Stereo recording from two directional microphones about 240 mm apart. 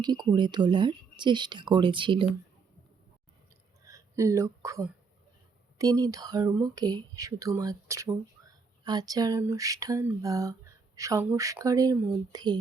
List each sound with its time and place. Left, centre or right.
0.0 s speech: centre
3.8 s speech: centre